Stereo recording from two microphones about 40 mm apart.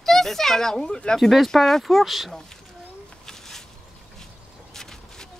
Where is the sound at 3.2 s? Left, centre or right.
Centre.